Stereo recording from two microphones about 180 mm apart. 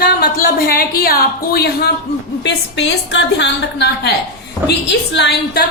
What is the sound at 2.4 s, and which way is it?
A woman's voice, 75° left (ahead or behind).